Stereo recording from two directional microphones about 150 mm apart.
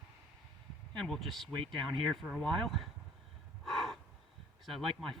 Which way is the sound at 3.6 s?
Centre (ahead or behind).